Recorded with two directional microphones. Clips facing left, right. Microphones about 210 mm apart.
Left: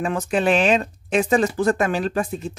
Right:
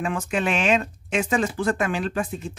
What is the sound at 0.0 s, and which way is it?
Speech, 35° left (ahead or behind).